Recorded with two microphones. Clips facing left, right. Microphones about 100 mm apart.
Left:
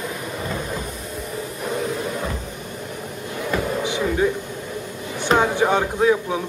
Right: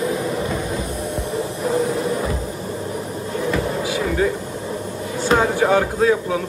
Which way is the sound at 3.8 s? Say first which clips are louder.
Even; 25° left (ahead or behind).